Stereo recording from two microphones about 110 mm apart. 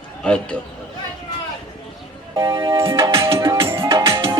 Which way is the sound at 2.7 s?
25° right (ahead or behind).